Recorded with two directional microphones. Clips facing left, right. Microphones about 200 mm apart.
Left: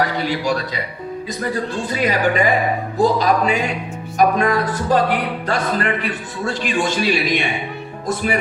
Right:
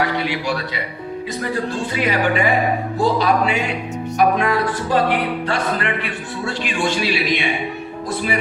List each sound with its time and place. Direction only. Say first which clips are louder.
0.0 s a man's voice: left 1 dB; 40° left (ahead or behind)
1.9 s a man's voice: left 2 dB; 40° left (ahead or behind)